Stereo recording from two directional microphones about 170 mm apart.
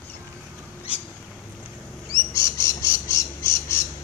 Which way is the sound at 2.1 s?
15° left (ahead or behind).